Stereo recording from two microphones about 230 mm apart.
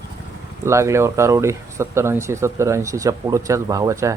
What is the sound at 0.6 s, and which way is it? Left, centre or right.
Speech, centre.